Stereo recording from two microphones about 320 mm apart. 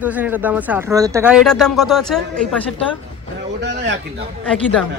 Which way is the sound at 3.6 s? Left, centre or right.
Right.